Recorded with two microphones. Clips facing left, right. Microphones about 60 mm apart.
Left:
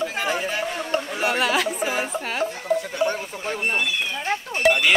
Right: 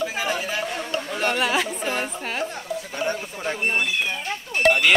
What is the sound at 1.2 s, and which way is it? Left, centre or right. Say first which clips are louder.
Speech: even; centre.